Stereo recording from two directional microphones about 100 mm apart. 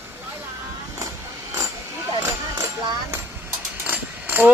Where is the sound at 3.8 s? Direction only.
20° right (ahead or behind).